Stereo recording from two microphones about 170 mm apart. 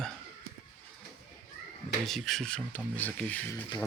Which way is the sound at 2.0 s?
Centre (ahead or behind).